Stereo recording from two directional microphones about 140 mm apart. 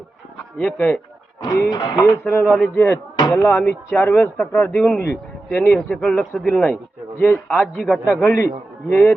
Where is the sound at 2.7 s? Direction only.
20° left (ahead or behind).